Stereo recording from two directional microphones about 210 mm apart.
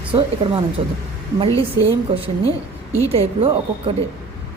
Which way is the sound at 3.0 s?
30° right (ahead or behind).